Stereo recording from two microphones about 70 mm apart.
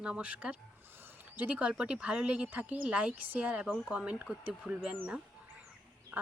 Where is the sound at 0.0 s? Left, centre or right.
Centre.